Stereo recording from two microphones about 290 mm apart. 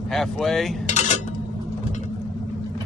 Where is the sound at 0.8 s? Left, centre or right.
Left.